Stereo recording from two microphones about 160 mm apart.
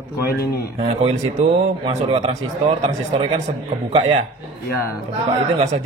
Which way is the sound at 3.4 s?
40° right (ahead or behind).